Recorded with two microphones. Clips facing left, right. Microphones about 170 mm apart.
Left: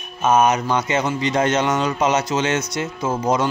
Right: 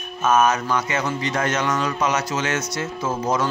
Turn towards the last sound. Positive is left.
turn(degrees=15)  # may be behind; listen again after turning